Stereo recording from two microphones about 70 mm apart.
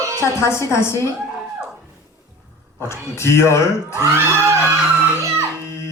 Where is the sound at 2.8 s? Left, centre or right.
Left.